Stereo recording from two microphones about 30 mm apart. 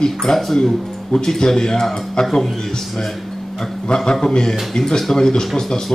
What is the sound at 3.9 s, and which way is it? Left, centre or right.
Speech, left.